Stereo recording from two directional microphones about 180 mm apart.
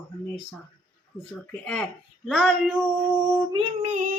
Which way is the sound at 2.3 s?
Centre (ahead or behind).